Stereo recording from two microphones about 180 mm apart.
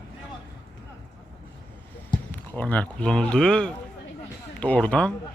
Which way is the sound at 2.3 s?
10° left (ahead or behind).